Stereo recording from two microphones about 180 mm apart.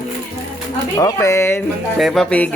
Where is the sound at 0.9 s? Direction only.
15° left (ahead or behind).